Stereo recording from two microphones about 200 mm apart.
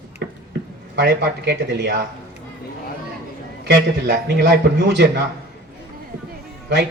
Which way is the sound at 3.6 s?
55° right (ahead or behind).